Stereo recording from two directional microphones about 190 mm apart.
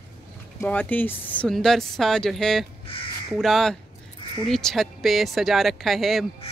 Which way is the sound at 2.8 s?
30° left (ahead or behind).